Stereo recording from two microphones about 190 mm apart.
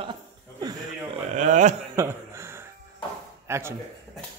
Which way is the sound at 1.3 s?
40° right (ahead or behind).